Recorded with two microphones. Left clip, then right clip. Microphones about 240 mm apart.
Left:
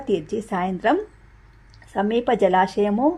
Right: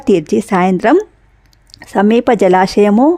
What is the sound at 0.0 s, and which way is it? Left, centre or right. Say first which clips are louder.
Speech: right 12 dB; right.